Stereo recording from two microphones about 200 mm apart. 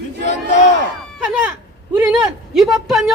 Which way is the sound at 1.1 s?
5° right (ahead or behind).